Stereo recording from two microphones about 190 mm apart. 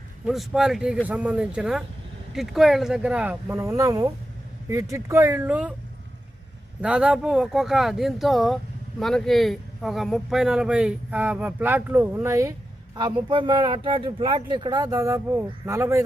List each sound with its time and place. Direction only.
0.3 s speech: centre (ahead or behind)
6.8 s speech: 5° right (ahead or behind)